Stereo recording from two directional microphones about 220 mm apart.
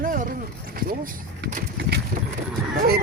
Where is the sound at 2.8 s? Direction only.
45° right (ahead or behind).